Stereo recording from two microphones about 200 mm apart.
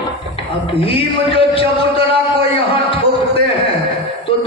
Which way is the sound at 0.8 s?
25° left (ahead or behind).